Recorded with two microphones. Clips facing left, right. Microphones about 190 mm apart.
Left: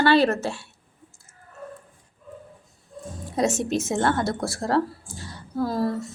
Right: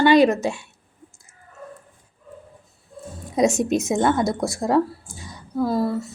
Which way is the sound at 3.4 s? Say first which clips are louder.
Right 4 dB; 15° right (ahead or behind).